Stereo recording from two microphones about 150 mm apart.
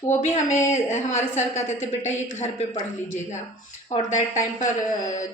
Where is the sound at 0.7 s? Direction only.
55° left (ahead or behind).